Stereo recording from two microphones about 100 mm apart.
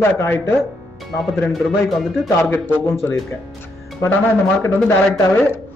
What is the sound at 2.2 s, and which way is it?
Speech, 20° left (ahead or behind).